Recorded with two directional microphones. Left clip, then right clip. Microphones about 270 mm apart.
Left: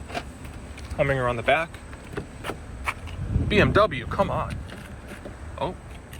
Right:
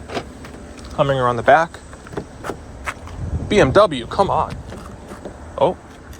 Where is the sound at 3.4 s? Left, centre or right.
Centre.